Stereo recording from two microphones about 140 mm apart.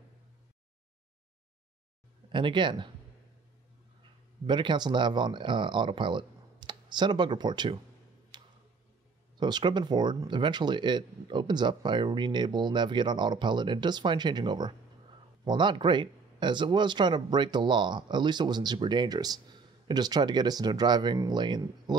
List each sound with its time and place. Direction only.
2.2 s speech: 35° right (ahead or behind)
4.5 s speech: 35° right (ahead or behind)
8.3 s tick-tock: 30° right (ahead or behind)
9.4 s speech: 30° right (ahead or behind)